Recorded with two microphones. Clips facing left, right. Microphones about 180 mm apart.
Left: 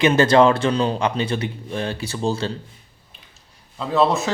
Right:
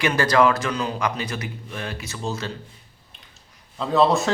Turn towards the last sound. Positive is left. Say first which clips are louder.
# even
turn(degrees=0)  # may be behind; listen again after turning